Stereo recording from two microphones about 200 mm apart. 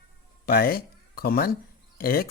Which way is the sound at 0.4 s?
50° left (ahead or behind).